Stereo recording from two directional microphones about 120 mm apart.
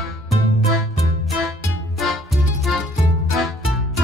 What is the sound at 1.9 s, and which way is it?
Music, centre (ahead or behind).